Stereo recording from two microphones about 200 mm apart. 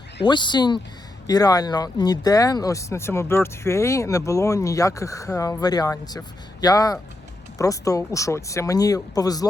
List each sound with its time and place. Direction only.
0.3 s speech: 20° left (ahead or behind)